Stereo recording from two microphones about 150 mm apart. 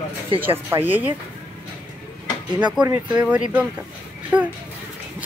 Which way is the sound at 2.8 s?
25° right (ahead or behind).